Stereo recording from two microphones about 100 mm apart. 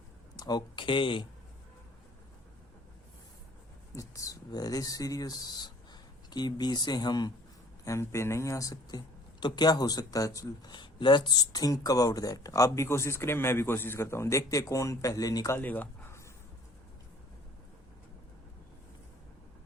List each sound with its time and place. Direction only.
0.3 s speech: 45° left (ahead or behind); by 1.3 s 60° left (ahead or behind)
3.9 s speech: 35° left (ahead or behind)
7.9 s speech: 30° left (ahead or behind)
15.5 s speech: 20° left (ahead or behind)